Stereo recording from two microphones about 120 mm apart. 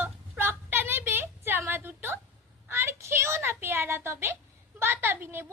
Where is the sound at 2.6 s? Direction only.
20° right (ahead or behind).